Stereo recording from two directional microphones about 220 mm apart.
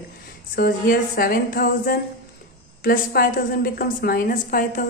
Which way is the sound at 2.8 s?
45° left (ahead or behind).